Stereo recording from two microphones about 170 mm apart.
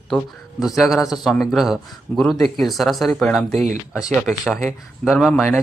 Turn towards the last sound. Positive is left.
turn(degrees=0)  # may be behind; listen again after turning